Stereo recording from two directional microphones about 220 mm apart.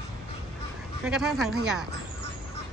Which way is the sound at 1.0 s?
5° right (ahead or behind).